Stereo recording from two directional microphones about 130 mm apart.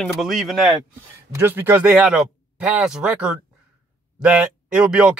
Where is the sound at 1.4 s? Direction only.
15° right (ahead or behind).